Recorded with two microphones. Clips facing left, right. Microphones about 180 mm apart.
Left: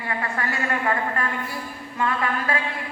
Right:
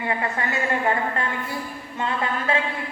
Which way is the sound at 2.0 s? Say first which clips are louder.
Left 1 dB; 25° right (ahead or behind).